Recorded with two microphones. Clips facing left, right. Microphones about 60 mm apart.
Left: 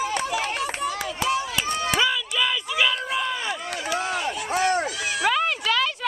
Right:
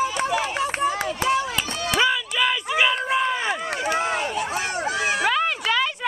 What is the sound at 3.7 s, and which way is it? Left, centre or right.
Run, right.